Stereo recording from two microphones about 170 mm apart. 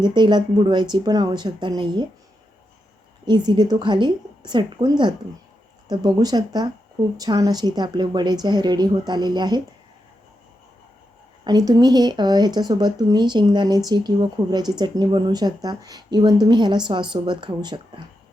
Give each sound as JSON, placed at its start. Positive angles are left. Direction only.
{"t": 0.0, "sound": "speech", "side_deg": -25}
{"t": 3.2, "sound": "speech", "side_deg": -25}
{"t": 11.4, "sound": "speech", "side_deg": -25}